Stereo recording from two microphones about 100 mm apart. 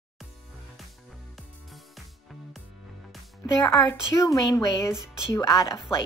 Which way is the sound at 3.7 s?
30° left (ahead or behind).